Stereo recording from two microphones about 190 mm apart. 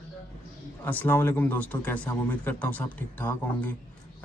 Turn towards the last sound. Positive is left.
turn(degrees=10)  # may be behind; listen again after turning